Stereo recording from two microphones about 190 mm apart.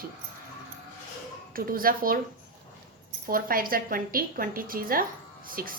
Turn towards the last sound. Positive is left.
turn(degrees=-50)  # may be behind; listen again after turning